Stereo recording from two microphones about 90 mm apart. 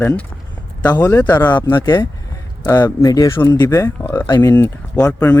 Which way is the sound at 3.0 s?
45° left (ahead or behind).